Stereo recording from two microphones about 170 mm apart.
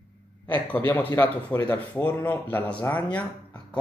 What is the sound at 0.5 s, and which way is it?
Speech, 10° left (ahead or behind).